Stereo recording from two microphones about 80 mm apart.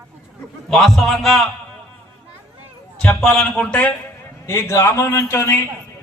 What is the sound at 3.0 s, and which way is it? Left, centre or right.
Speech, centre.